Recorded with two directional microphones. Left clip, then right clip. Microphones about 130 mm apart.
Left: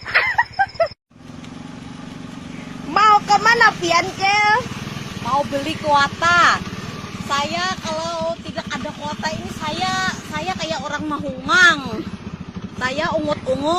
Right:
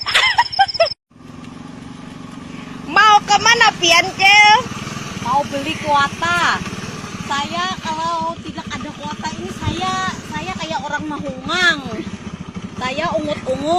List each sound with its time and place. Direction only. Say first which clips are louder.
0.0 s a sound: right 3 dB; 20° right (ahead or behind)
2.9 s vehicle: right 2 dB; centre (ahead or behind)
3.5 s speech: right 3 dB; centre (ahead or behind)
5.2 s speech: right 2 dB; 20° left (ahead or behind)
7.3 s a sound: even; 25° left (ahead or behind)
8.5 s vehicle: left 1 dB; 25° left (ahead or behind)
12.8 s speech: right 1 dB; 15° left (ahead or behind)